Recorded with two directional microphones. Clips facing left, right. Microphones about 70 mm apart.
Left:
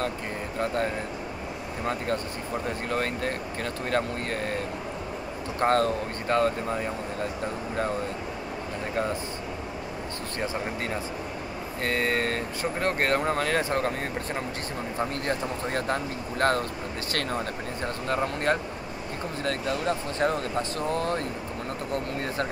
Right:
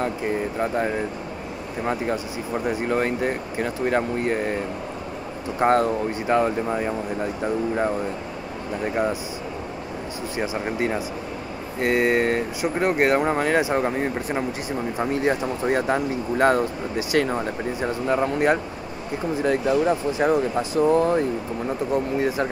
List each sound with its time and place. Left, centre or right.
0.6 s speech: centre
5.6 s speech: centre
10.3 s speech: centre